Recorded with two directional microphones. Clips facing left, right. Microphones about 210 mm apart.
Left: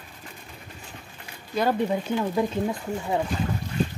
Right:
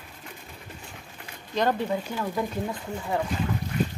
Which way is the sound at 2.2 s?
20° left (ahead or behind).